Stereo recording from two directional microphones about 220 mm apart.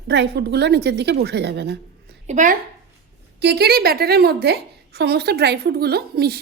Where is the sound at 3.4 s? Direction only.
50° right (ahead or behind).